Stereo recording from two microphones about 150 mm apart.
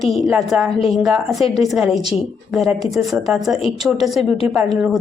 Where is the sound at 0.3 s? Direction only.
5° right (ahead or behind).